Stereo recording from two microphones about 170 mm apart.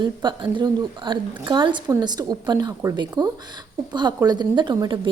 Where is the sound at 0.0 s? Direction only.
25° right (ahead or behind).